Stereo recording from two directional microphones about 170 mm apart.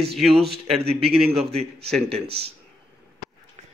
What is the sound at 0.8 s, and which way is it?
A man's voice, 35° right (ahead or behind).